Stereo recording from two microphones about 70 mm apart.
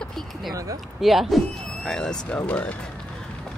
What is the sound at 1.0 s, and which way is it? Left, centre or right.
Speech, centre.